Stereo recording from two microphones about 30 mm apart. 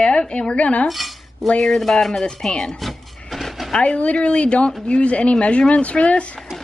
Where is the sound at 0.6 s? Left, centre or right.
Left.